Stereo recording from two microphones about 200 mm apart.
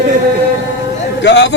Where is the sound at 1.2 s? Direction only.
60° left (ahead or behind).